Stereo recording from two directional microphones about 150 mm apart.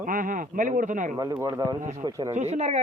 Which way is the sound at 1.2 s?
25° right (ahead or behind).